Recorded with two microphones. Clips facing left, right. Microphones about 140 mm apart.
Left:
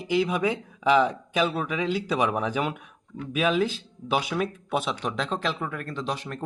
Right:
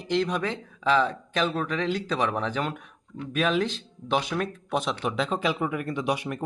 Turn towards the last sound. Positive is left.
turn(degrees=-10)  # may be behind; listen again after turning